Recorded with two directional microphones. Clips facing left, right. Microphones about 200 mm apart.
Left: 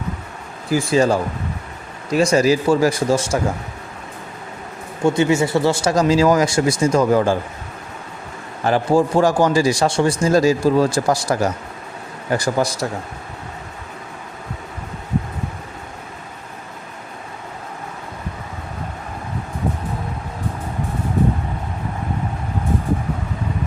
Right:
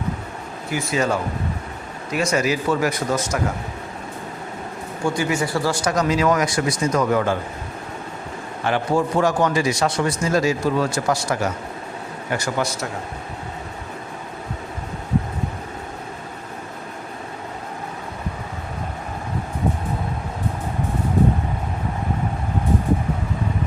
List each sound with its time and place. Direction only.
0.7 s speech: 30° left (ahead or behind)
5.0 s speech: 25° left (ahead or behind)
8.6 s speech: 35° left (ahead or behind)